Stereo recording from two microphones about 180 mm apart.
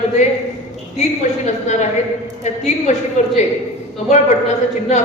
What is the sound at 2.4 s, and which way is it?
Speech, 40° left (ahead or behind).